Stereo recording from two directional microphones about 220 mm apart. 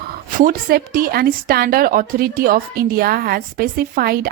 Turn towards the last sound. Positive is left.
turn(degrees=-40)  # may be behind; listen again after turning